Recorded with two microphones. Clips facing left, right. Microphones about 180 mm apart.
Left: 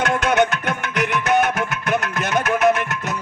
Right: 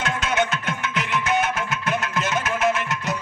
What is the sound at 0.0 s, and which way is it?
Music, 60° left (ahead or behind).